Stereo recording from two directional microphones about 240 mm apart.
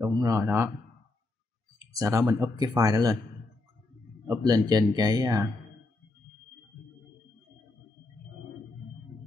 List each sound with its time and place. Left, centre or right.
0.0 s speech: centre
2.0 s speech: centre
4.3 s speech: centre